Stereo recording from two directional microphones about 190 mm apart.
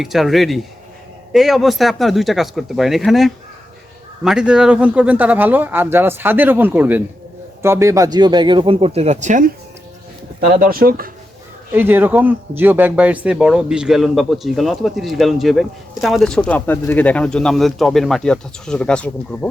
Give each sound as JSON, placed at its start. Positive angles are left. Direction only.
{"t": 0.0, "sound": "speech", "side_deg": 0}
{"t": 11.7, "sound": "speech", "side_deg": -10}